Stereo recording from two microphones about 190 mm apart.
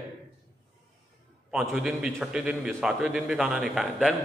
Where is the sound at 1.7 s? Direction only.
5° right (ahead or behind).